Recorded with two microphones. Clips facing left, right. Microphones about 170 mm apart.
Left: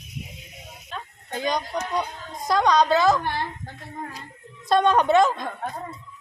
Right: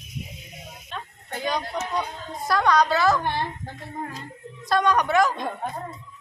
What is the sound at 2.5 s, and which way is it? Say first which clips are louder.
Speech: left 1 dB; 20° left (ahead or behind).